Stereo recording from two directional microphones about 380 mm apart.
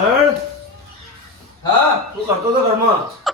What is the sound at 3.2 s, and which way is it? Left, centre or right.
Beatboxing, centre.